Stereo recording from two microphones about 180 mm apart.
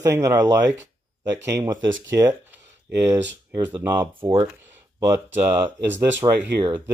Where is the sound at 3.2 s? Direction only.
80° right.